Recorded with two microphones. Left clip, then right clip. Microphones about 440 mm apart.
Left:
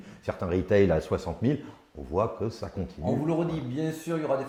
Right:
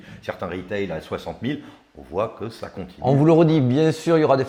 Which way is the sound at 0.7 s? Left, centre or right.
Left.